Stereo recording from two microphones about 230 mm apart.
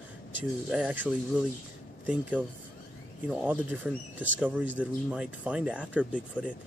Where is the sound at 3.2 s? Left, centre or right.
Centre.